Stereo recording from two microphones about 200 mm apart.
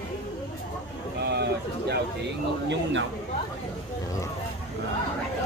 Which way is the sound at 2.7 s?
65° right (ahead or behind).